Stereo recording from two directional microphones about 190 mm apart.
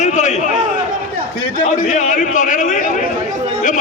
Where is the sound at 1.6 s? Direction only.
40° left (ahead or behind).